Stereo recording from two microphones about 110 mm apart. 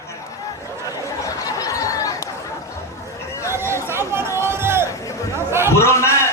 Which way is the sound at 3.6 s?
20° right (ahead or behind).